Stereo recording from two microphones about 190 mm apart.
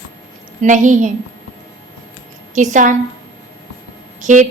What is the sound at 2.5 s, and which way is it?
Speech, 40° right (ahead or behind).